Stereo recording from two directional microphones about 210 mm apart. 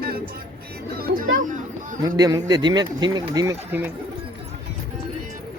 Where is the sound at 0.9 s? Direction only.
45° right (ahead or behind).